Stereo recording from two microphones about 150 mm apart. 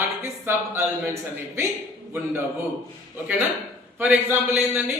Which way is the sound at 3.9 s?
10° right (ahead or behind).